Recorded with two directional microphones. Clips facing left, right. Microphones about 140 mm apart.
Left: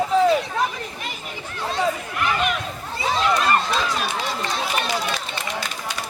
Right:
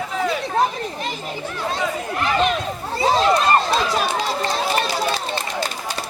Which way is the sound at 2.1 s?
30° right (ahead or behind).